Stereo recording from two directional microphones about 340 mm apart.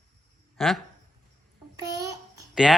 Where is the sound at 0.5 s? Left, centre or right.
Centre.